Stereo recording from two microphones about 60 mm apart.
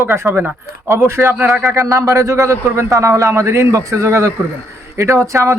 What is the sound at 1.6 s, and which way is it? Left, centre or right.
A man's voice, right.